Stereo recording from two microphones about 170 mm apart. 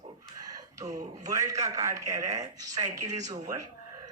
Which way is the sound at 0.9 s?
20° right (ahead or behind).